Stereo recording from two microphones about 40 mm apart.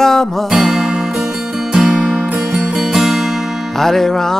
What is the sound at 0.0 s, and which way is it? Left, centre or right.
Music, centre.